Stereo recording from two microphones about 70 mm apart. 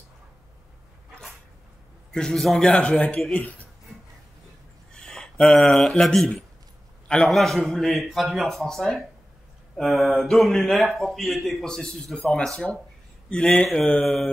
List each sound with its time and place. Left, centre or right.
2.1 s a man's voice: centre
4.9 s a sound: centre
5.7 s a man's voice: centre
14.0 s a man's voice: centre